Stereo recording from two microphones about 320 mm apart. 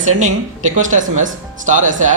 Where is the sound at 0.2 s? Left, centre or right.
Right.